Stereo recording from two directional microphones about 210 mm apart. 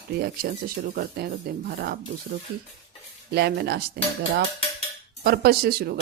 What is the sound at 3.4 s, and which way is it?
Speech, 50° right (ahead or behind).